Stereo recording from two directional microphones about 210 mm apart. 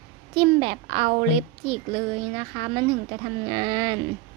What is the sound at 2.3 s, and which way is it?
Speech, 25° right (ahead or behind).